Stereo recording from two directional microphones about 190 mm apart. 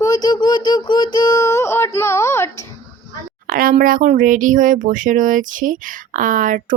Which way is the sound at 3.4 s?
45° right (ahead or behind).